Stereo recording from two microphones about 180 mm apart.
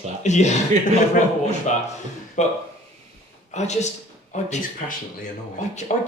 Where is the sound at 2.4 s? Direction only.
40° left (ahead or behind).